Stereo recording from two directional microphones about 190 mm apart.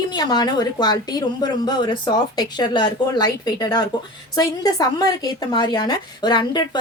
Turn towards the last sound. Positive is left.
turn(degrees=20)  # may be behind; listen again after turning